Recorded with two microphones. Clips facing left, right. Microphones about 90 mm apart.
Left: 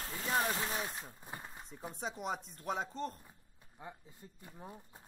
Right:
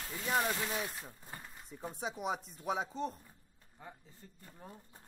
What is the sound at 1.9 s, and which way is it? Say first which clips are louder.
Speech: right 2 dB; 5° right (ahead or behind).